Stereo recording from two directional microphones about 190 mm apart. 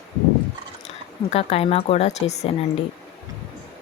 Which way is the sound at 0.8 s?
35° left (ahead or behind).